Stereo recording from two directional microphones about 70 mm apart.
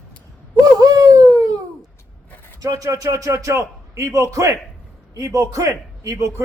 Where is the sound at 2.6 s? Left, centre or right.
Right.